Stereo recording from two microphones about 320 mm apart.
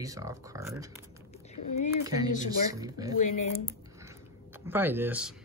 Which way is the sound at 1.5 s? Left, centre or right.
Left.